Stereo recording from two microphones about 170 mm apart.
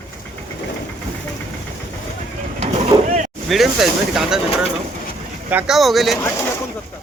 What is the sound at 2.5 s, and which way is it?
Vehicle, 35° right (ahead or behind).